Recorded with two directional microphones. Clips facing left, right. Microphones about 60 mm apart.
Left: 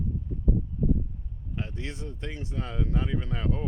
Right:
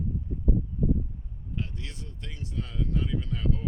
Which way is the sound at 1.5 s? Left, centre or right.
Left.